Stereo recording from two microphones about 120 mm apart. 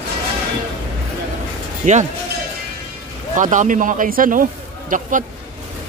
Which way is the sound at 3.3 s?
90° right.